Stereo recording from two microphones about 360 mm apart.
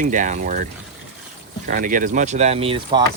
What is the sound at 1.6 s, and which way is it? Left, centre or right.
Speech, right.